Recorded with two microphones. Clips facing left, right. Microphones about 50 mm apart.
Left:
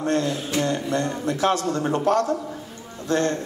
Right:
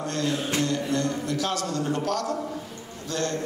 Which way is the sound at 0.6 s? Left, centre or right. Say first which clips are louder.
Left 5 dB; left.